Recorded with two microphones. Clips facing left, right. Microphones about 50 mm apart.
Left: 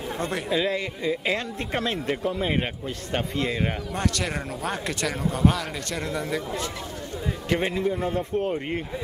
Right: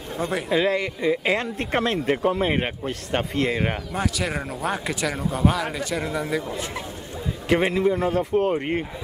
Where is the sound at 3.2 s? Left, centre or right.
Right.